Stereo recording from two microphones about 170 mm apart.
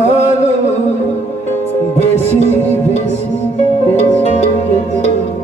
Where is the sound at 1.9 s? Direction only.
40° left (ahead or behind).